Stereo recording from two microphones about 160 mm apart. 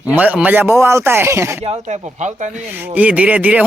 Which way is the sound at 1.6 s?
45° right (ahead or behind).